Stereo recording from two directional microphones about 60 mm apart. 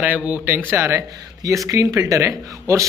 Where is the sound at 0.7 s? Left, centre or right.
Right.